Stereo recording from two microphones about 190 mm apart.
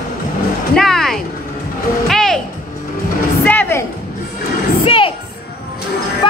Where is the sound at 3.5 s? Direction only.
10° left (ahead or behind).